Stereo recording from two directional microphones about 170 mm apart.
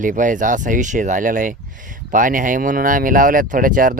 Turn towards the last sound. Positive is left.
turn(degrees=-55)  # may be behind; listen again after turning